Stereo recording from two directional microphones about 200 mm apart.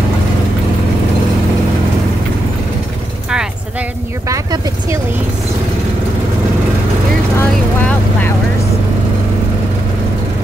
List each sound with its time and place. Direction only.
4.3 s vehicle: 15° right (ahead or behind)
7.3 s vehicle: 10° left (ahead or behind)